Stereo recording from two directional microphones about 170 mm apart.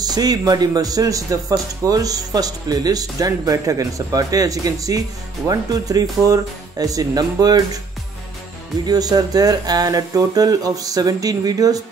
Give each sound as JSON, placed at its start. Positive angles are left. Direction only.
{"t": 0.0, "sound": "speech", "side_deg": -25}
{"t": 8.8, "sound": "speech", "side_deg": -20}